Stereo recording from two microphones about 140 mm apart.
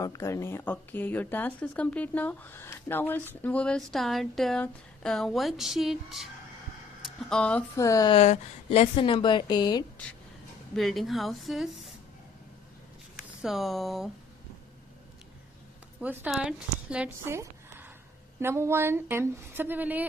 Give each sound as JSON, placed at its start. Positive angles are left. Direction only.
{"t": 0.0, "sound": "speech", "side_deg": 20}
{"t": 7.7, "sound": "speech", "side_deg": 25}
{"t": 8.1, "sound": "speech", "side_deg": 50}
{"t": 10.7, "sound": "speech", "side_deg": 0}
{"t": 13.4, "sound": "speech", "side_deg": 0}
{"t": 16.0, "sound": "a woman's voice", "side_deg": -15}